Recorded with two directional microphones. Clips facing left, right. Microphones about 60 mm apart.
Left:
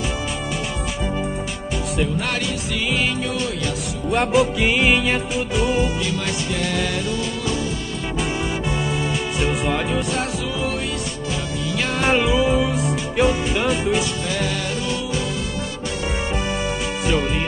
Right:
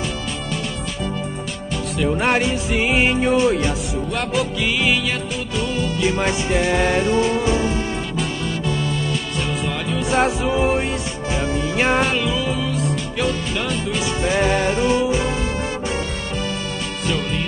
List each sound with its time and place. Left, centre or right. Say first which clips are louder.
2.1 s music: right 5 dB; right
4.1 s music: left 7 dB; centre
5.3 s music: left 3 dB; centre
5.9 s music: right 4 dB; right
9.4 s music: left 6 dB; centre
10.1 s music: right 6 dB; right
12.1 s music: left 4 dB; centre
14.2 s music: right 6 dB; right